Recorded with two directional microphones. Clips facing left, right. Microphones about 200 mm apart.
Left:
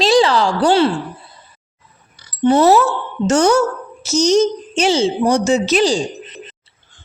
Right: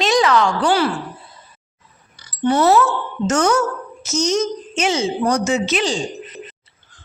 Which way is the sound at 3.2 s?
30° left (ahead or behind).